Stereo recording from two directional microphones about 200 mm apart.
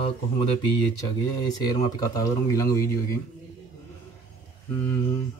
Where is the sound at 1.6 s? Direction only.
20° left (ahead or behind).